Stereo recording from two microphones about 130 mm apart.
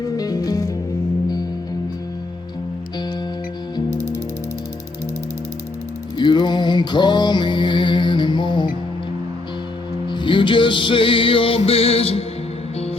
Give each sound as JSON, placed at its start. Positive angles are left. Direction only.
{"t": 0.2, "sound": "music", "side_deg": 30}
{"t": 6.1, "sound": "music", "side_deg": 35}
{"t": 10.1, "sound": "music", "side_deg": 35}